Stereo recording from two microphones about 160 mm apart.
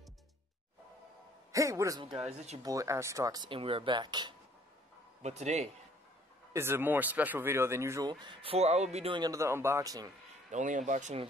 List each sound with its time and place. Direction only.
1.5 s speech: 20° right (ahead or behind)
2.2 s speech: 40° right (ahead or behind)
2.6 s speech: 20° right (ahead or behind)
5.2 s speech: 45° right (ahead or behind)
6.5 s speech: 15° right (ahead or behind); by 9.2 s 40° right (ahead or behind)
9.2 s speech: 20° right (ahead or behind)
10.5 s speech: 50° right (ahead or behind)